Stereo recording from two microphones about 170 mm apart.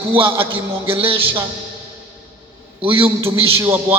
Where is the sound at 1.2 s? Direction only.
10° right (ahead or behind).